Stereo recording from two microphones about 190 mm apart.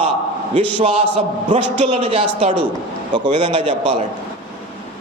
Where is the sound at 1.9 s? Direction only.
25° right (ahead or behind).